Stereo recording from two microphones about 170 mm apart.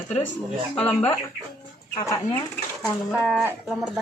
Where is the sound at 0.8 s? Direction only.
5° left (ahead or behind).